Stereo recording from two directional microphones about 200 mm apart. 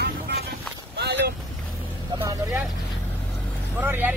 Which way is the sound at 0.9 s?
55° right (ahead or behind).